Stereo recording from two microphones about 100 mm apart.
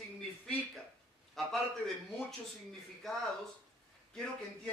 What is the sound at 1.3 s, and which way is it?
A woman's voice, 5° left (ahead or behind).